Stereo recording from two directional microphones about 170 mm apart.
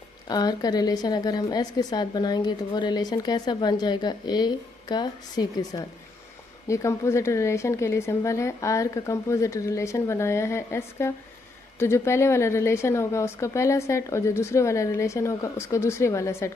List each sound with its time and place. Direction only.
0.3 s a woman's voice: 25° left (ahead or behind)